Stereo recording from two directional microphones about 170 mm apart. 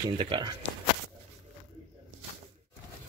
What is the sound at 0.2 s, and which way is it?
Speech, 25° right (ahead or behind).